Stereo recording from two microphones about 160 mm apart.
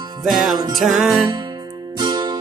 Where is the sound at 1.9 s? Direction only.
25° right (ahead or behind).